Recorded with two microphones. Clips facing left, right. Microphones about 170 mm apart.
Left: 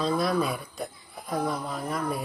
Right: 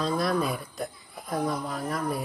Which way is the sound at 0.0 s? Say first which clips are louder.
Left 1 dB; centre (ahead or behind).